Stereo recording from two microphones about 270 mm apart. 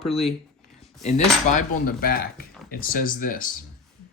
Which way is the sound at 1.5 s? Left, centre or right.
Left.